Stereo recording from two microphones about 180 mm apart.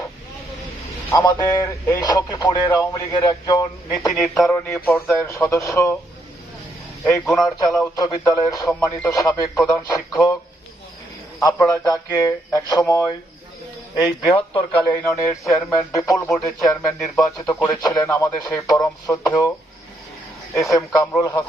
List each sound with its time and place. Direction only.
1.1 s speech: 20° left (ahead or behind)
4.1 s a man's voice: centre (ahead or behind)
4.4 s speech: 15° left (ahead or behind)
7.0 s a man's voice: centre (ahead or behind)
7.4 s speech: 20° left (ahead or behind)
11.3 s a man's voice: 20° left (ahead or behind)
14.8 s speech: 15° left (ahead or behind)
20.6 s speech: 20° left (ahead or behind)